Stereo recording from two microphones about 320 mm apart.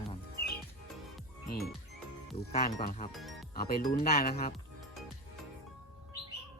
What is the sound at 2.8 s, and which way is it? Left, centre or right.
Speech, left.